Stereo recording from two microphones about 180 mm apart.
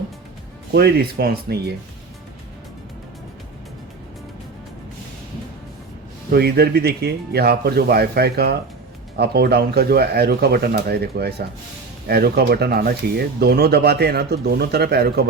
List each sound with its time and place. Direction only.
0.7 s speech: 65° right (ahead or behind)
6.3 s speech: 60° right (ahead or behind)